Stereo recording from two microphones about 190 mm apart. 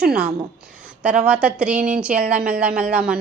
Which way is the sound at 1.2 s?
5° right (ahead or behind).